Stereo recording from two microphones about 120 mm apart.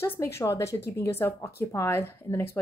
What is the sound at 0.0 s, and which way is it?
Speech, 20° left (ahead or behind).